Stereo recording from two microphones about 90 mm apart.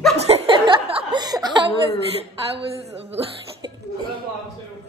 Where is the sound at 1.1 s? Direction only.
50° right (ahead or behind).